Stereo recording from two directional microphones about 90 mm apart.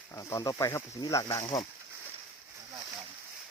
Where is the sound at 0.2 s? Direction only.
40° left (ahead or behind).